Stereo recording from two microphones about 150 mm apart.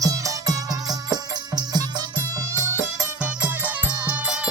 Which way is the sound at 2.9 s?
10° right (ahead or behind).